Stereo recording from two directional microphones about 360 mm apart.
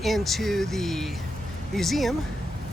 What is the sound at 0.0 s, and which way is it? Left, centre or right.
Speech, centre.